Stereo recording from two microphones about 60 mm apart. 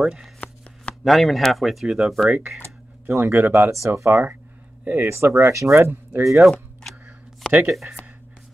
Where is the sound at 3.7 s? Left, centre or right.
Right.